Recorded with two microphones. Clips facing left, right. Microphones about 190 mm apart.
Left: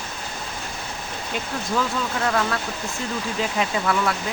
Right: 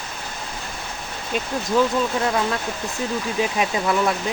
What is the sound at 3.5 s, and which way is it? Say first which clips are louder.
Speech: even; 20° right (ahead or behind).